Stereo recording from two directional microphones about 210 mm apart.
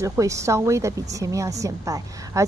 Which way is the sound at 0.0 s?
15° right (ahead or behind).